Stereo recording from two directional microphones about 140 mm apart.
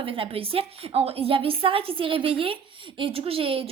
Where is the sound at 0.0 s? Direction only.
40° right (ahead or behind).